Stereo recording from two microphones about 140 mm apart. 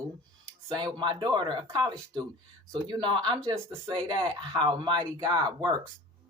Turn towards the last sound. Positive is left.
turn(degrees=-30)  # may be behind; listen again after turning